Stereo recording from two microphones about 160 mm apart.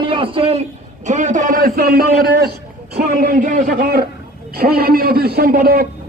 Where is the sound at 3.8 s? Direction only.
75° right (ahead or behind).